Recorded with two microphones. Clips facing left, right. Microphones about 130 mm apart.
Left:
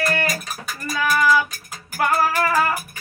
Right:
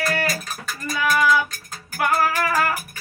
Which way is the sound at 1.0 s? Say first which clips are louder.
Even; 5° left (ahead or behind).